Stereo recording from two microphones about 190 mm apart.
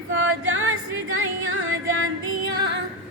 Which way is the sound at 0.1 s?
90° right.